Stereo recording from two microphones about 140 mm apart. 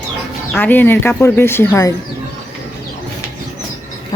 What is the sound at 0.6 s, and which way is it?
Speech, 15° left (ahead or behind).